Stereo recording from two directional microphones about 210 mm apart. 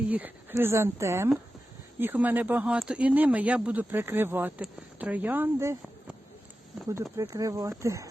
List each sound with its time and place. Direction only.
0.1 s speech: 10° right (ahead or behind)
7.2 s speech: 15° right (ahead or behind)